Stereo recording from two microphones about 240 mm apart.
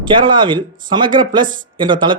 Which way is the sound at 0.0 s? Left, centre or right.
Centre.